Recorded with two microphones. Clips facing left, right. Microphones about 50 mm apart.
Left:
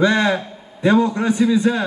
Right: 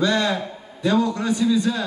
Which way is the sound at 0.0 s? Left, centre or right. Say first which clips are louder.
Left 4 dB; left.